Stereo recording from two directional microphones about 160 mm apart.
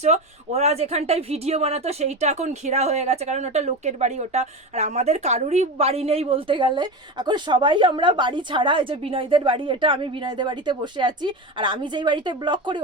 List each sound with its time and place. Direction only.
0.0 s a woman's voice: 45° right (ahead or behind)